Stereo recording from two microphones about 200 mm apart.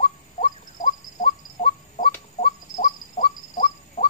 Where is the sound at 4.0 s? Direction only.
40° left (ahead or behind).